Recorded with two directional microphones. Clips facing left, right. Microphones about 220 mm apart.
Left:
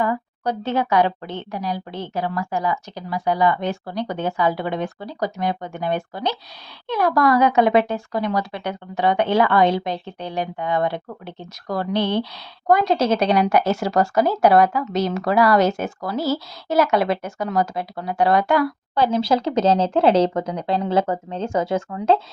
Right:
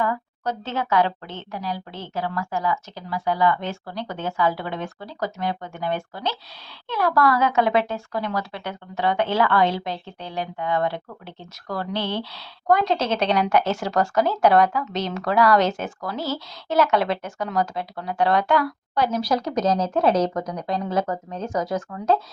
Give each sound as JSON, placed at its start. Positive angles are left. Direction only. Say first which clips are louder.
{"t": 0.0, "sound": "speech", "louder": "left 3 dB", "side_deg": 15}
{"t": 18.9, "sound": "speech", "louder": "left 3 dB", "side_deg": 25}